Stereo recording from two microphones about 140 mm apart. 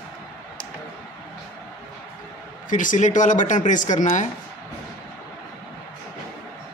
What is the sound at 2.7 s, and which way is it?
Speech, 65° left (ahead or behind).